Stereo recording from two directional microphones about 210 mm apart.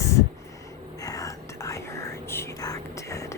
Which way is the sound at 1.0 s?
15° left (ahead or behind).